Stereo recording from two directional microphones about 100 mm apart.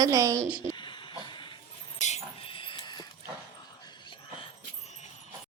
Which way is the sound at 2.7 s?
45° left (ahead or behind).